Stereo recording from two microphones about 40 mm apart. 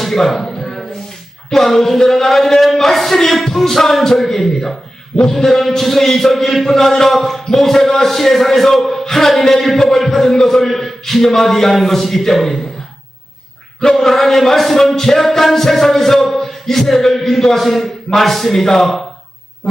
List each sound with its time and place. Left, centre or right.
0.0 s speech: centre
0.5 s a sound: centre
1.5 s music: centre
14.0 s music: centre